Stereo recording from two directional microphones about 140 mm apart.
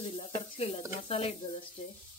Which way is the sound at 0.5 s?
40° left (ahead or behind).